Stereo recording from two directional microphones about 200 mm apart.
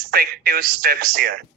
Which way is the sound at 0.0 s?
50° right (ahead or behind).